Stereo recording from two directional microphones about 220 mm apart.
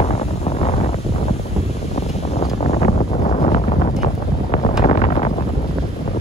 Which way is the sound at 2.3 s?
30° left (ahead or behind).